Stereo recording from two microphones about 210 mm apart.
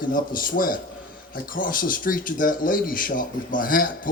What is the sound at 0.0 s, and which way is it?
Speech, 40° left (ahead or behind).